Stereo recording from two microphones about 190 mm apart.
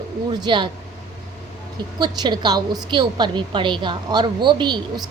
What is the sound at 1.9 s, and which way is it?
A woman's voice, 20° right (ahead or behind).